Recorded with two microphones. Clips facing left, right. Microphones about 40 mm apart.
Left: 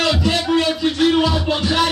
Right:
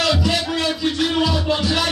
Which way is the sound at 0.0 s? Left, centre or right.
Left.